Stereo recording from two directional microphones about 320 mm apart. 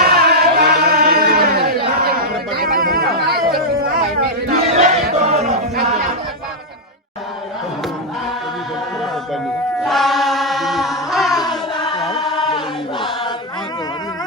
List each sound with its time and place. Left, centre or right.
0.0 s a sound: right
4.4 s battle cry: right
9.8 s chant: centre
11.3 s child singing: centre
12.3 s choir: centre